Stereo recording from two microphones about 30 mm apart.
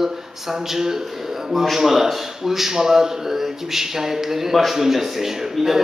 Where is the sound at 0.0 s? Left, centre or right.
Centre.